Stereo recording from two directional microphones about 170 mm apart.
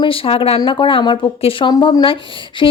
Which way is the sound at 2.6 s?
25° left (ahead or behind).